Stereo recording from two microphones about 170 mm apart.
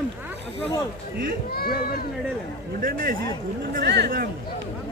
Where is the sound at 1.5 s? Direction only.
65° left (ahead or behind).